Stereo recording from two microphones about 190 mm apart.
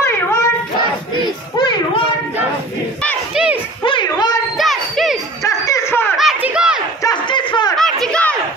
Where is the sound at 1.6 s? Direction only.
25° left (ahead or behind).